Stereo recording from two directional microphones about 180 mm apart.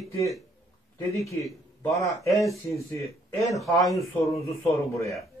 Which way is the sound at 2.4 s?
15° left (ahead or behind).